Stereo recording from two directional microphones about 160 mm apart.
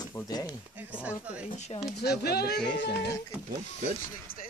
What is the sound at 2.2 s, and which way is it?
Speech, 85° left.